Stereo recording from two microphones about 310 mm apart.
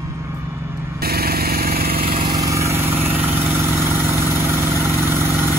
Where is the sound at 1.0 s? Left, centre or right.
Right.